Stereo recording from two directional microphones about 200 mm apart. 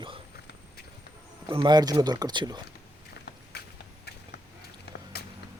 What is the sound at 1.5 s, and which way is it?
Speech, 25° right (ahead or behind).